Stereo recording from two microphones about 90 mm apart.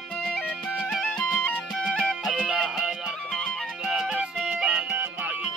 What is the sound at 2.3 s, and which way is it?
Music, 10° right (ahead or behind).